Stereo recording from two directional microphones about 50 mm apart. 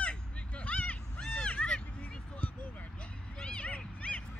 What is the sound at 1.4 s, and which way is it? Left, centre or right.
Vehicle, centre.